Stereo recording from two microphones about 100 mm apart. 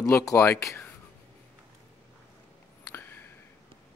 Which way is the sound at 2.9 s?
20° left (ahead or behind).